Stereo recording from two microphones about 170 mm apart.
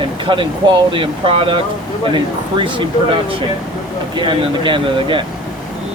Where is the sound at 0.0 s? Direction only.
30° right (ahead or behind).